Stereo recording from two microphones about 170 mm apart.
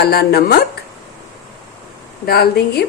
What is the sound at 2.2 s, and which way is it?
Speech, 65° left (ahead or behind).